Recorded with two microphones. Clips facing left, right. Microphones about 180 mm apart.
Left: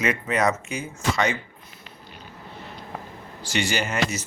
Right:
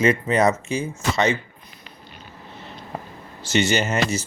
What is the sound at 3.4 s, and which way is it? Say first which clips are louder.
Speech: right 5 dB; 25° right (ahead or behind).